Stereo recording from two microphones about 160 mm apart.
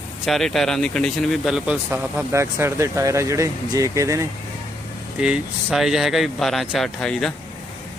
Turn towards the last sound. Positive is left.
turn(degrees=5)  # may be behind; listen again after turning